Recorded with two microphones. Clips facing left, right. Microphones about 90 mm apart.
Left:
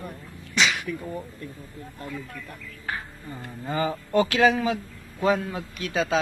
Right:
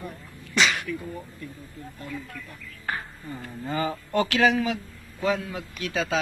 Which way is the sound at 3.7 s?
25° left (ahead or behind).